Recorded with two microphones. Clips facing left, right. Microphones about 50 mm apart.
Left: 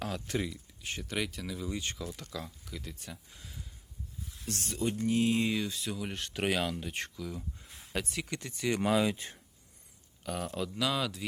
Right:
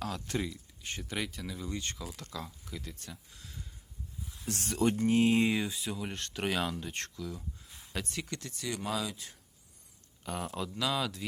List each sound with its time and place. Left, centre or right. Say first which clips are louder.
0.0 s speech: left 1 dB; centre
4.4 s speech: right 4 dB; right
5.5 s speech: right 1 dB; centre
5.8 s speech: left 1 dB; centre
8.4 s speech: left 1 dB; centre
8.9 s speech: left 7 dB; left
10.2 s speech: left 1 dB; centre